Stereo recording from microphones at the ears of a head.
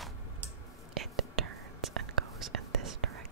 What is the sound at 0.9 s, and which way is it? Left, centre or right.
Whispering, right.